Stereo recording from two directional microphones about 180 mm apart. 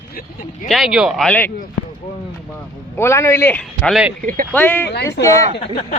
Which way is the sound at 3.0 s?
15° left (ahead or behind).